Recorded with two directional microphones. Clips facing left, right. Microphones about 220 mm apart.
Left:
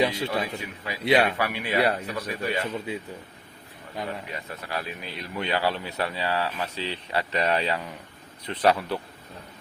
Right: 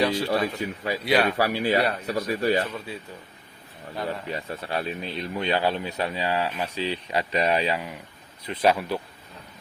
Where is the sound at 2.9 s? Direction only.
20° left (ahead or behind).